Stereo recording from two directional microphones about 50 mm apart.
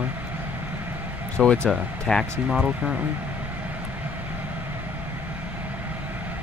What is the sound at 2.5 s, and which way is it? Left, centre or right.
Speech, centre.